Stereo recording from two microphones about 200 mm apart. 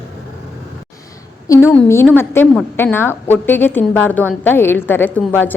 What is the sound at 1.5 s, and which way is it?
A woman's voice, 15° left (ahead or behind).